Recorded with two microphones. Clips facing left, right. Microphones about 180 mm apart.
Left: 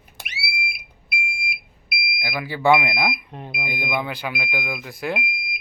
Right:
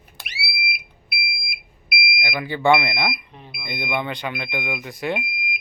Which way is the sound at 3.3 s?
55° left (ahead or behind).